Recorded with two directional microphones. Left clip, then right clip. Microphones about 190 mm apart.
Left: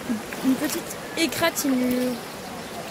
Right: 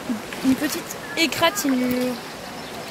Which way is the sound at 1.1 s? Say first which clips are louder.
Right 3 dB; 5° right (ahead or behind).